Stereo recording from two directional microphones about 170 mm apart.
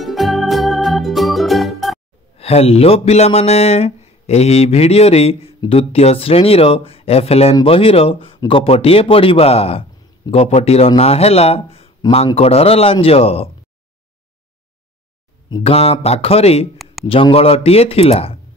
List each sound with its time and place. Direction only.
0.0 s music: centre (ahead or behind)
2.3 s speech: 35° left (ahead or behind)
15.6 s speech: 35° left (ahead or behind)